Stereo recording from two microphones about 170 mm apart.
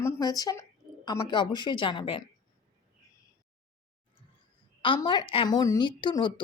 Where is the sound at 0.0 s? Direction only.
20° left (ahead or behind).